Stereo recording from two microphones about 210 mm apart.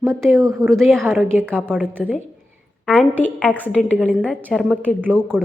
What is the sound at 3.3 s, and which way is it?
A woman's voice, 5° left (ahead or behind).